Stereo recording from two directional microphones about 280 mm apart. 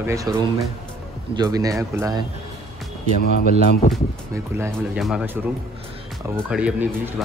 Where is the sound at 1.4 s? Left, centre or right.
Centre.